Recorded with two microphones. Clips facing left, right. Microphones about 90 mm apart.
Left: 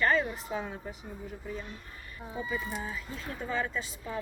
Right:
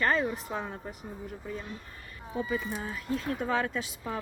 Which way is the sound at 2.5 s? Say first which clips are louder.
Right 2 dB; 60° right (ahead or behind).